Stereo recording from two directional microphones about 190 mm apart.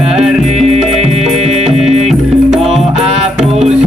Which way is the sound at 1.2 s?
Centre (ahead or behind).